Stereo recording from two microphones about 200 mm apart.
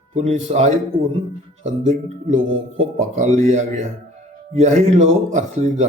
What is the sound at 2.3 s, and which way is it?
Speech, 75° right (ahead or behind).